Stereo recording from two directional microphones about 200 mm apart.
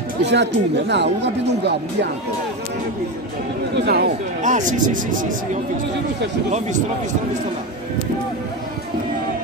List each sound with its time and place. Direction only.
0.2 s speech: 60° right (ahead or behind)
3.7 s speech: 55° right (ahead or behind)
4.4 s speech: 40° right (ahead or behind)